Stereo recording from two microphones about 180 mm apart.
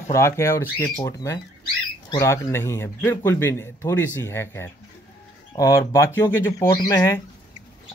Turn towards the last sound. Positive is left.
turn(degrees=20)  # may be behind; listen again after turning